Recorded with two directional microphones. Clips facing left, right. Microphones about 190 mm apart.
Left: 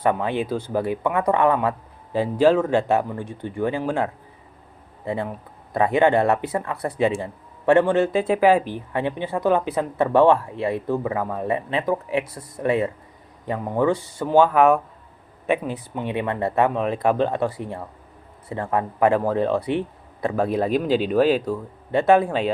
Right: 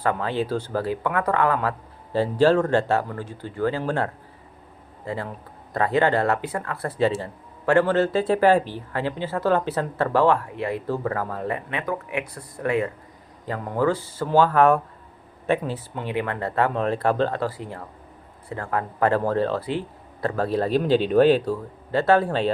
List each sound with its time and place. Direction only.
0.0 s speech: 20° left (ahead or behind)
2.1 s speech: 10° left (ahead or behind)
8.7 s speech: 20° left (ahead or behind)
16.7 s speech: 10° left (ahead or behind)
21.9 s speech: 15° left (ahead or behind)